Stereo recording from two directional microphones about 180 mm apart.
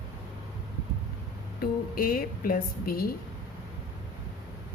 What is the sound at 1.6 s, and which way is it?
Speech, 55° left (ahead or behind).